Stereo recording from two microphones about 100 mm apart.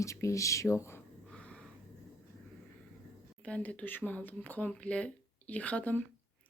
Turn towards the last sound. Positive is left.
turn(degrees=15)  # may be behind; listen again after turning